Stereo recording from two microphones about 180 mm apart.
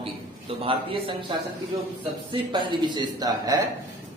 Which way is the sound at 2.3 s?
25° right (ahead or behind).